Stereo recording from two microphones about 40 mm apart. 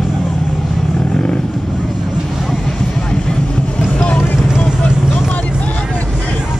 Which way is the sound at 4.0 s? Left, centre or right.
Left.